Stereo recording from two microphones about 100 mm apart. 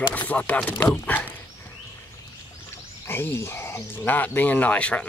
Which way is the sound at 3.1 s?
25° left (ahead or behind).